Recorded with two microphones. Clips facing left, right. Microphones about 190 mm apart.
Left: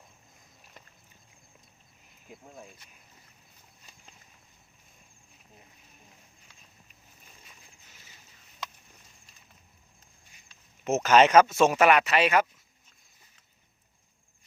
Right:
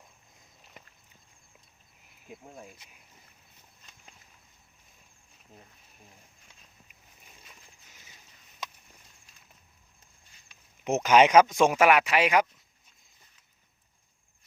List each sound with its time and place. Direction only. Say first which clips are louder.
10.5 s speech: left 1 dB; 15° right (ahead or behind)